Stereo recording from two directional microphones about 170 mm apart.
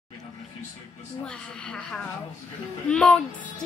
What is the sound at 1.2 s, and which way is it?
A woman's voice, 5° left (ahead or behind).